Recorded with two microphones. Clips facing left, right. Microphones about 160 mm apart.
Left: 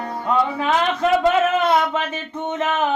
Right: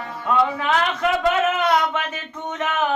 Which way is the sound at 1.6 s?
25° left (ahead or behind).